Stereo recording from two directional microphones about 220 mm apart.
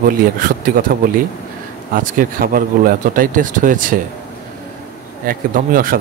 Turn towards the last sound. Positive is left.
turn(degrees=-40)  # may be behind; listen again after turning